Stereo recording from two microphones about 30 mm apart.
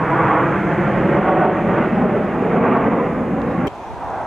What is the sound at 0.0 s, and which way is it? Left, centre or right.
Vehicle, centre.